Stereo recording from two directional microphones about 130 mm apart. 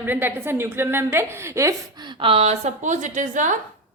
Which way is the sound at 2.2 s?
50° right (ahead or behind).